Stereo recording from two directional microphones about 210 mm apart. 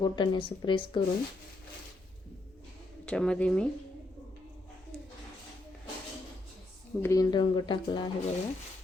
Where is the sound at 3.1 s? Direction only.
5° left (ahead or behind).